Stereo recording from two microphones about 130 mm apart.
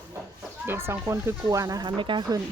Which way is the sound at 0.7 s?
20° right (ahead or behind).